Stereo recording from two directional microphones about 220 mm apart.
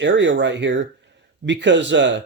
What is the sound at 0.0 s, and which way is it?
Speech, 55° right (ahead or behind).